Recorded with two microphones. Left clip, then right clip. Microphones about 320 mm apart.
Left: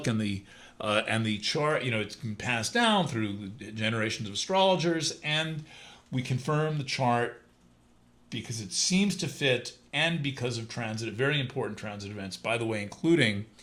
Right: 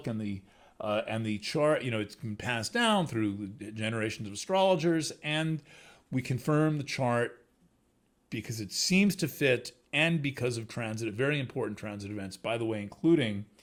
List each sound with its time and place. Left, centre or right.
0.0 s speech: centre
1.4 s speech: right
8.3 s speech: right